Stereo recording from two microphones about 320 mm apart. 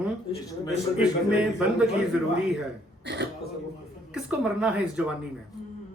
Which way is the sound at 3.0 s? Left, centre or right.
Right.